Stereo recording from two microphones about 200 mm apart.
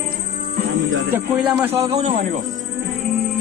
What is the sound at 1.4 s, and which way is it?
Speech, 10° right (ahead or behind).